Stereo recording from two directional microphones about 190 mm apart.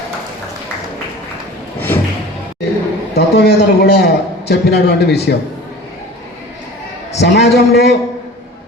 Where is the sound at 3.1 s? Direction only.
60° left (ahead or behind).